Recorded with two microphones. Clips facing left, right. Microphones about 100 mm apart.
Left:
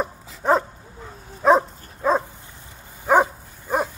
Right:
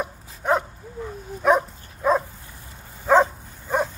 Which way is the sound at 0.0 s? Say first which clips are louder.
Left 4 dB; 35° left (ahead or behind).